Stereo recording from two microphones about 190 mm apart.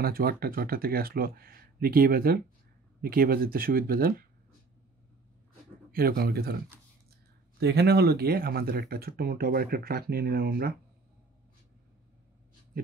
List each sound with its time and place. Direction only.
0.0 s speech: 55° right (ahead or behind)
5.9 s speech: 50° right (ahead or behind)
7.6 s speech: 60° right (ahead or behind)